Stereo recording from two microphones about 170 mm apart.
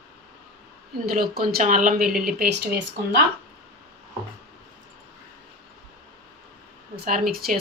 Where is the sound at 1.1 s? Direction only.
60° right (ahead or behind).